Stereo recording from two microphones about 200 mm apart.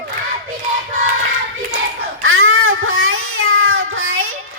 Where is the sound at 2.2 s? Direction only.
90° right.